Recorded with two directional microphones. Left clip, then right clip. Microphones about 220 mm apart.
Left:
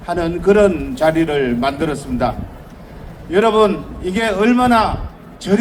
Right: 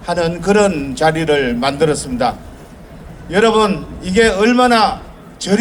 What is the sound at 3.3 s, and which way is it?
A man's voice, 40° right (ahead or behind).